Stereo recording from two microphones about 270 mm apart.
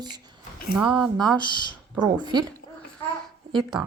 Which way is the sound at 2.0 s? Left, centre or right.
Centre.